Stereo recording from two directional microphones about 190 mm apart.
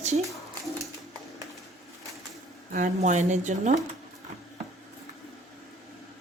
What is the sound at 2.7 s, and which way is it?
Speech, 40° right (ahead or behind).